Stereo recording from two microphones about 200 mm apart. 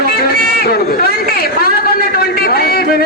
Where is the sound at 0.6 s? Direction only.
50° left (ahead or behind).